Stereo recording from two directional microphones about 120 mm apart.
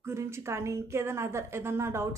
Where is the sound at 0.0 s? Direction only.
20° right (ahead or behind).